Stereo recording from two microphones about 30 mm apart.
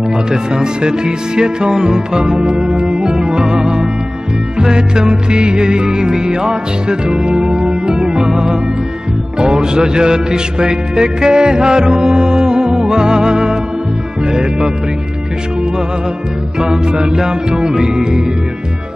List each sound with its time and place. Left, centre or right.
0.3 s music: right
4.6 s music: right
16.6 s music: centre
17.0 s music: right